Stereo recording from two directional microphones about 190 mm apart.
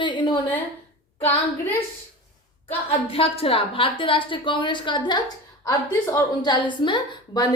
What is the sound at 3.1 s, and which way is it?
A woman's voice, 30° left (ahead or behind).